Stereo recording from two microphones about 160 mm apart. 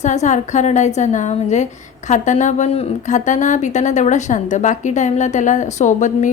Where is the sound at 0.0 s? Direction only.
45° left (ahead or behind).